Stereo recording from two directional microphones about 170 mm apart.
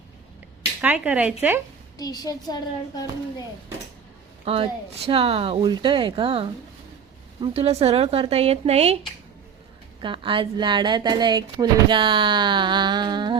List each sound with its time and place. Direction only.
0.8 s speech: 10° right (ahead or behind)
2.0 s a child's voice: 20° left (ahead or behind)
4.4 s speech: 35° right (ahead or behind)
10.0 s speech: 30° right (ahead or behind)